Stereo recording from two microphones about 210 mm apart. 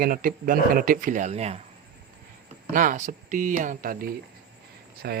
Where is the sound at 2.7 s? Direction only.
40° right (ahead or behind).